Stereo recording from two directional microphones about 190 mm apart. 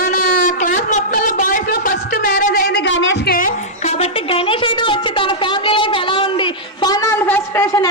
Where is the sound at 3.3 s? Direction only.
45° left (ahead or behind).